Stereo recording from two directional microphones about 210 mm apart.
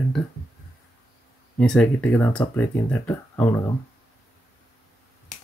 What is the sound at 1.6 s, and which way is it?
Speech, 5° left (ahead or behind).